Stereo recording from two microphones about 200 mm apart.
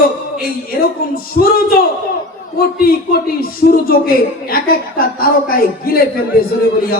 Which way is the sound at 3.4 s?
45° left (ahead or behind).